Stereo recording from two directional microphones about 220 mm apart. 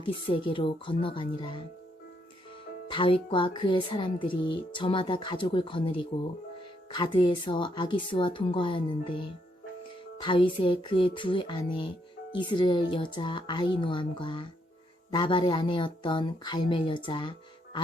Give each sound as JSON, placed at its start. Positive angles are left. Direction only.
{"t": 0.0, "sound": "speech", "side_deg": 25}
{"t": 2.9, "sound": "speech", "side_deg": 25}